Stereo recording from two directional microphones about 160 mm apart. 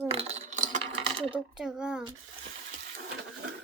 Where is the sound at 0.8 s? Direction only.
35° right (ahead or behind).